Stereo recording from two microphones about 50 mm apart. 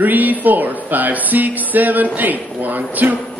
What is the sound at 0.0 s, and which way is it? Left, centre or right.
Speech, right.